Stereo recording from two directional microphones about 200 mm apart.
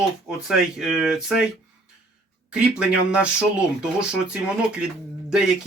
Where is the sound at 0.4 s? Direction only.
Centre (ahead or behind).